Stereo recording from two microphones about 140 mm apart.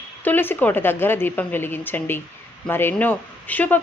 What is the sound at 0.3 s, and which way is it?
A woman's voice, 15° left (ahead or behind).